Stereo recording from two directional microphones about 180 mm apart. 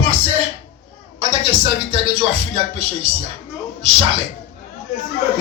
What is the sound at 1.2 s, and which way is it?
Speech, 30° right (ahead or behind).